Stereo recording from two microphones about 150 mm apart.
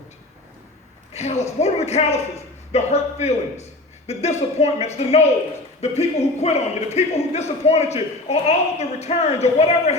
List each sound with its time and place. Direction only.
1.1 s a man's voice: 45° left (ahead or behind)